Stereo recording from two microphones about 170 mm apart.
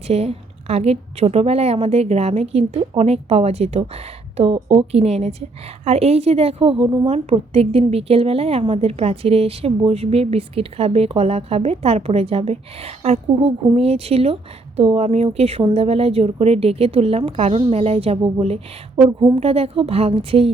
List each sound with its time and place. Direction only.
0.1 s a woman's voice: 35° right (ahead or behind)